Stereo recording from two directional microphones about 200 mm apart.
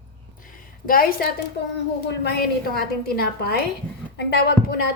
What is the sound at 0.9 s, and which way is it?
Speech, 45° left (ahead or behind).